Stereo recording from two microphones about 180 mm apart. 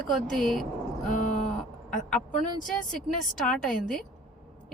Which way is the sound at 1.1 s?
45° left (ahead or behind).